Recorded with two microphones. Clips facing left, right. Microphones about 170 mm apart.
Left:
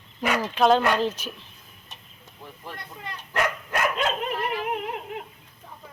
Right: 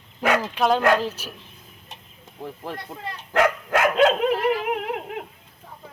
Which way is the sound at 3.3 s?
90° right.